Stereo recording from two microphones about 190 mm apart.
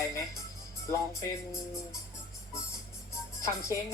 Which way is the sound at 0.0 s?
15° left (ahead or behind).